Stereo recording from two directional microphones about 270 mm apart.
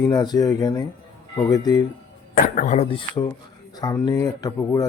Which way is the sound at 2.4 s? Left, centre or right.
Left.